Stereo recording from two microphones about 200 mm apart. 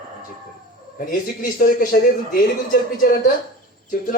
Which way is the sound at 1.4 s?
45° left (ahead or behind).